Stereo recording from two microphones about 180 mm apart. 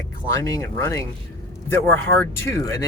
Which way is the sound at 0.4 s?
15° left (ahead or behind).